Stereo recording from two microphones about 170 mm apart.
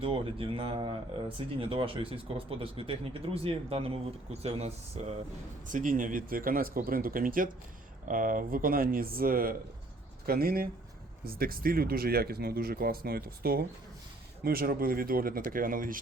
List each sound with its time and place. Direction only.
0.0 s speech: 30° right (ahead or behind)
5.6 s speech: 50° right (ahead or behind)